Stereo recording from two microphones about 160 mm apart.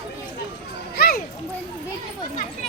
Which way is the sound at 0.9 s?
75° left (ahead or behind).